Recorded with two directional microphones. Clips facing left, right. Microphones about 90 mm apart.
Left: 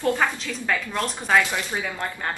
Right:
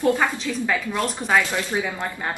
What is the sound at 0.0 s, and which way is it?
A woman's voice, 5° right (ahead or behind).